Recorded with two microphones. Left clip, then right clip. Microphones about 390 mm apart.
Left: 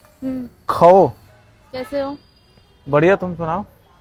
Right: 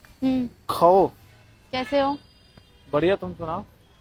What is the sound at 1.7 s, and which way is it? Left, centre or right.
Speech, centre.